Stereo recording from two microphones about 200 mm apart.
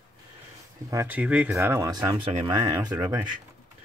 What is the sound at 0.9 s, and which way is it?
Speech, 10° right (ahead or behind).